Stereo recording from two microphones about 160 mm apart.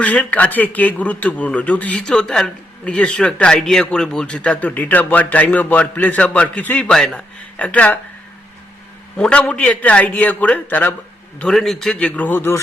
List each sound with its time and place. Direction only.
0.0 s a man's voice: 10° left (ahead or behind)
9.1 s a man's voice: 5° left (ahead or behind)